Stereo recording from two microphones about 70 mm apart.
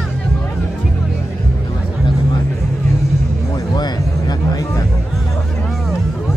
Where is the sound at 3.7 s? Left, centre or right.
Left.